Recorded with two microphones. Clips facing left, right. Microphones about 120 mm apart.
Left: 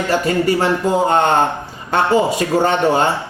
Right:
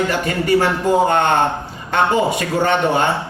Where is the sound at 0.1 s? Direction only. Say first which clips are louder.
Left 1 dB; 30° left (ahead or behind).